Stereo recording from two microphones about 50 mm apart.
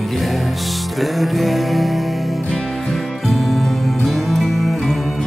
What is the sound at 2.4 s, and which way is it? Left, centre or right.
Music, left.